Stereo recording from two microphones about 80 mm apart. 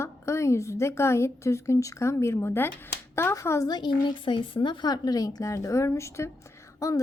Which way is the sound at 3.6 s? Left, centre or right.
Left.